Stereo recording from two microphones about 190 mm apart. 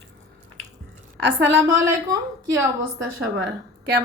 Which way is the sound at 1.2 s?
70° right (ahead or behind).